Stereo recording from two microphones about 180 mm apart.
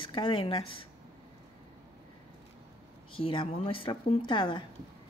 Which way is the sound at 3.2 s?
30° left (ahead or behind).